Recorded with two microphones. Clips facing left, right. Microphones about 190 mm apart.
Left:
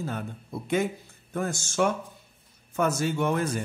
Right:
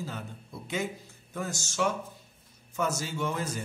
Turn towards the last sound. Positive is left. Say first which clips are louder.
# left 6 dB
turn(degrees=60)  # may be behind; listen again after turning